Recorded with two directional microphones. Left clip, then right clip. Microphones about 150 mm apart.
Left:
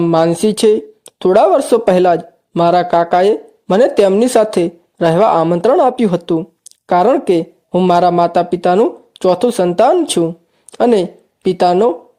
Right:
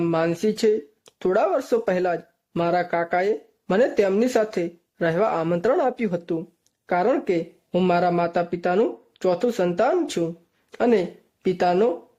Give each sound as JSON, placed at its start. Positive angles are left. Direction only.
{"t": 0.0, "sound": "speech", "side_deg": 40}